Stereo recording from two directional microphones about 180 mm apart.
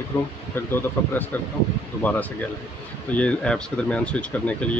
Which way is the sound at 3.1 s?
5° left (ahead or behind).